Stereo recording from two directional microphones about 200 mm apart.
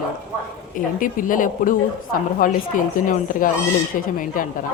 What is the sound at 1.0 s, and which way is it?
Speech, 40° left (ahead or behind).